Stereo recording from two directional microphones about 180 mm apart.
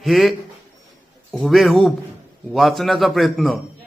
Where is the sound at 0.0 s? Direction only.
Centre (ahead or behind).